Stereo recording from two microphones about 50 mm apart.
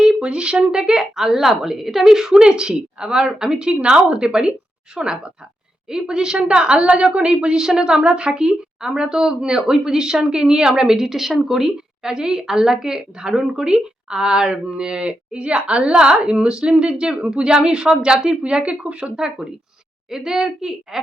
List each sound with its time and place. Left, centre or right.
0.0 s a woman's voice: centre